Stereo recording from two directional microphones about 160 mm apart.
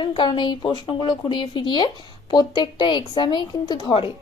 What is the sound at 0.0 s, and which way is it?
A woman's voice, 30° left (ahead or behind).